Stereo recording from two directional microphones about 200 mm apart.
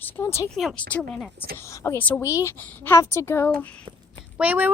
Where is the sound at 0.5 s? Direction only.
Centre (ahead or behind).